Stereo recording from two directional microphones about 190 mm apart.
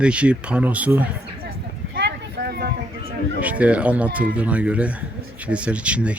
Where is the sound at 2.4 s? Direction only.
60° right (ahead or behind).